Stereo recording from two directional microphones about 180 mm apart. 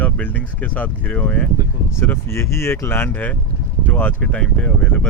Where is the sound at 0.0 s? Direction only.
10° left (ahead or behind).